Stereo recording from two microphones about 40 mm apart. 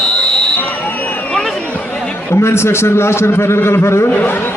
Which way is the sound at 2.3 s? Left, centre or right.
Left.